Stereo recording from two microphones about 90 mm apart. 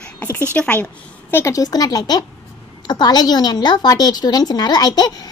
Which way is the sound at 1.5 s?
45° left (ahead or behind).